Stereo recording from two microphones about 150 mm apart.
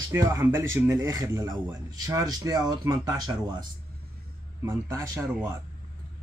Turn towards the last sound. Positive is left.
turn(degrees=-20)  # may be behind; listen again after turning